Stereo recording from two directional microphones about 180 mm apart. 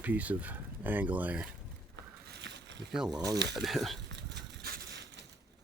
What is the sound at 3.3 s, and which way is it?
Speech, 70° right (ahead or behind).